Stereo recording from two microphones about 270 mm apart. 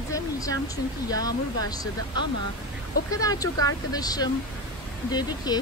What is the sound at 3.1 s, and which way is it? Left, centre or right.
Speech, centre.